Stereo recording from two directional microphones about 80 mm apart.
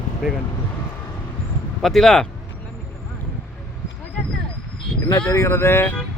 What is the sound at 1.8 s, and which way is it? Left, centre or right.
Speech, centre.